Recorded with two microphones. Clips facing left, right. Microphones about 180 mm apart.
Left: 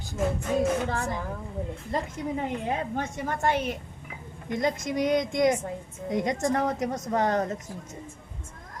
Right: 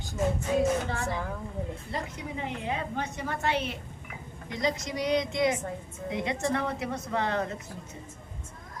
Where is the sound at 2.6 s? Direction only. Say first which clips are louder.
Left 3 dB; 45° left (ahead or behind).